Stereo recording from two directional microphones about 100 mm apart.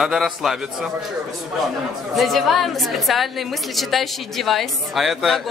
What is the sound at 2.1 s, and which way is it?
A woman's voice, centre (ahead or behind).